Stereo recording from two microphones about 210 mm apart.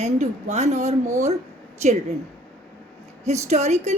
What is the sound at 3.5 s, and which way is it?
Speech, 30° right (ahead or behind).